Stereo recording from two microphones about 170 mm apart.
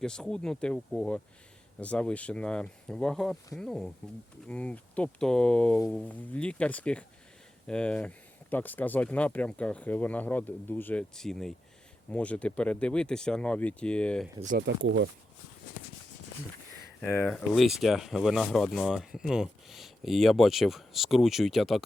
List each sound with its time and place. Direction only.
0.0 s speech: 5° left (ahead or behind)
14.7 s speech: 90° right
17.2 s speech: centre (ahead or behind)